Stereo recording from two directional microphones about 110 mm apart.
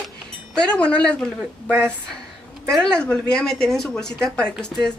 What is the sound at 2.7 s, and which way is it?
Speech, 10° left (ahead or behind).